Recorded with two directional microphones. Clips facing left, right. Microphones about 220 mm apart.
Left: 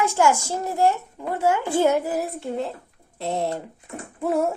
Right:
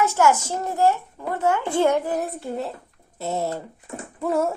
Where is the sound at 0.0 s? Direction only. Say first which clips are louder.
Right 1 dB; 15° left (ahead or behind); by 3.5 s 5° right (ahead or behind).